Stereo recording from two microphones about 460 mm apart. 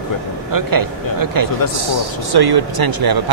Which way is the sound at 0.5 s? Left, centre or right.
Right.